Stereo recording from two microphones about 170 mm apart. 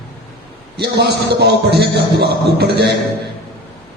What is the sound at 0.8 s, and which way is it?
A man's voice, 80° right.